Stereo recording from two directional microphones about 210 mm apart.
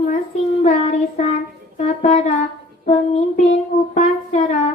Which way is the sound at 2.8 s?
30° left (ahead or behind).